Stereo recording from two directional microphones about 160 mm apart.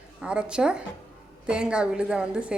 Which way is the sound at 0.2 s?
5° right (ahead or behind).